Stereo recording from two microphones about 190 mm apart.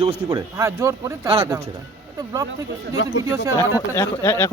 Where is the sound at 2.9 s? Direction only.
75° left (ahead or behind).